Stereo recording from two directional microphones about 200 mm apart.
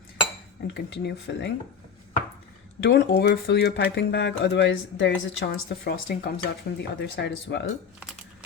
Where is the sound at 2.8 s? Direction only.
60° left (ahead or behind).